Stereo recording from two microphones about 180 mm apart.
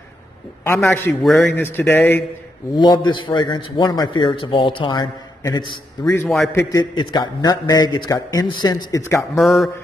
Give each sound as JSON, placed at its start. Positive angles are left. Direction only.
{"t": 1.2, "sound": "speech", "side_deg": 0}
{"t": 1.5, "sound": "speech", "side_deg": 10}
{"t": 2.7, "sound": "a man's voice", "side_deg": 25}
{"t": 6.2, "sound": "speech", "side_deg": 0}
{"t": 6.5, "sound": "a man's voice", "side_deg": 20}
{"t": 9.3, "sound": "speech", "side_deg": 0}